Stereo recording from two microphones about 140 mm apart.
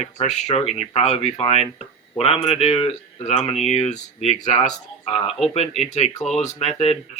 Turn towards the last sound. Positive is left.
turn(degrees=45)  # may be behind; listen again after turning